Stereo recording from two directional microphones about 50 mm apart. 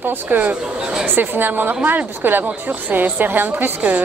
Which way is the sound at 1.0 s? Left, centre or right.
Right.